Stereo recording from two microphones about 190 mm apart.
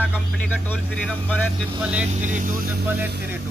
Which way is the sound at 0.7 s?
10° left (ahead or behind).